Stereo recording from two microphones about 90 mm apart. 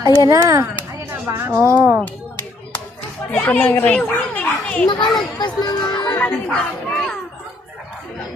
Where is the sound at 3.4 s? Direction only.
20° left (ahead or behind).